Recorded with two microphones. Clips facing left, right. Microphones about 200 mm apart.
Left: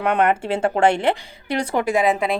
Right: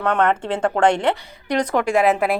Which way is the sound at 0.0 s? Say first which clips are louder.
Even; 15° left (ahead or behind).